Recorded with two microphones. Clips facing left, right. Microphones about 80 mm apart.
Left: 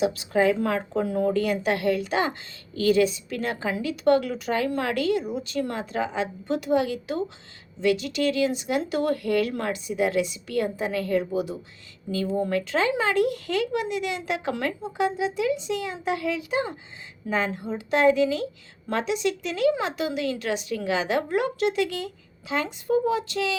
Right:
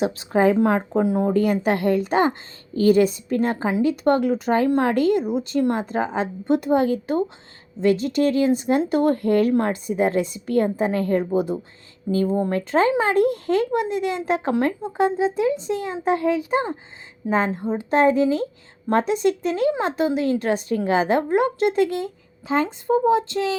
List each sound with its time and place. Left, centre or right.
0.0 s speech: right
1.3 s speech: right